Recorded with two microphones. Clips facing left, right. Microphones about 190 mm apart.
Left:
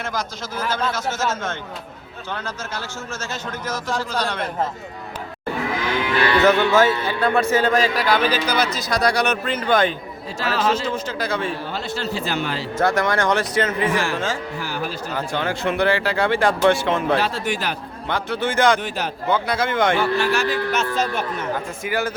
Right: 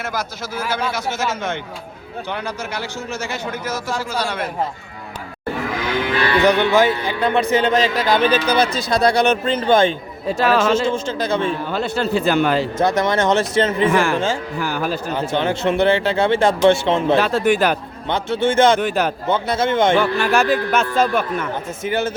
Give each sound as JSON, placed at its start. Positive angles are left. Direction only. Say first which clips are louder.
{"t": 0.0, "sound": "a man's voice", "louder": "right 2 dB", "side_deg": -5}
{"t": 6.4, "sound": "a man's voice", "louder": "right 1 dB", "side_deg": -15}
{"t": 10.2, "sound": "a man's voice", "louder": "right 6 dB", "side_deg": -60}
{"t": 10.8, "sound": "speech", "louder": "right 4 dB", "side_deg": -25}
{"t": 11.7, "sound": "a man's voice", "louder": "right 6 dB", "side_deg": -55}
{"t": 12.8, "sound": "speech", "louder": "even", "side_deg": -20}
{"t": 13.9, "sound": "a man's voice", "louder": "right 5 dB", "side_deg": -55}
{"t": 15.1, "sound": "speech", "louder": "right 3 dB", "side_deg": -25}
{"t": 17.2, "sound": "speech", "louder": "right 7 dB", "side_deg": -50}
{"t": 18.1, "sound": "speech", "louder": "right 5 dB", "side_deg": -25}
{"t": 18.8, "sound": "speech", "louder": "right 7 dB", "side_deg": -55}
{"t": 19.3, "sound": "speech", "louder": "right 1 dB", "side_deg": -25}
{"t": 20.1, "sound": "a man's voice", "louder": "right 3 dB", "side_deg": -55}
{"t": 21.5, "sound": "speech", "louder": "right 2 dB", "side_deg": -25}